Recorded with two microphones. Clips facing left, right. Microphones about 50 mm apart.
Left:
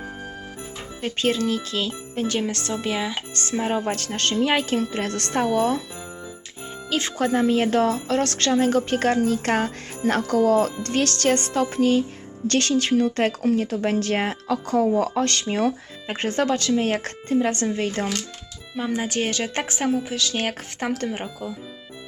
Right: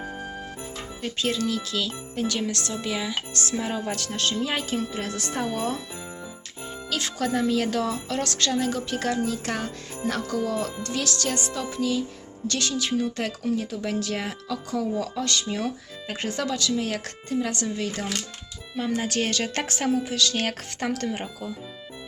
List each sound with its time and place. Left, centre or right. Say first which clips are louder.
1.0 s a woman's voice: left 4 dB; left
3.6 s speech: left 8 dB; left
6.9 s a woman's voice: left 4 dB; left
18.7 s a woman's voice: left 1 dB; centre